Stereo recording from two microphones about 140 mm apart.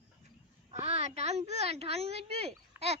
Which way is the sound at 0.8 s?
50° right (ahead or behind).